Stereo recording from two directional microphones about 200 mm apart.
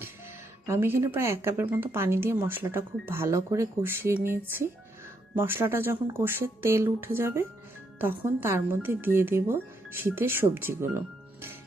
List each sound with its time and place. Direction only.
0.7 s speech: 10° right (ahead or behind)